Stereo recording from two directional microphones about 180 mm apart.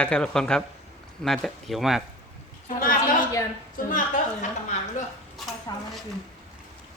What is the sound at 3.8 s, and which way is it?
Speech, 50° left (ahead or behind).